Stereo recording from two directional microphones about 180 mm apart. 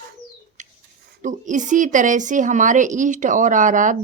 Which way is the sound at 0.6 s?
45° right (ahead or behind).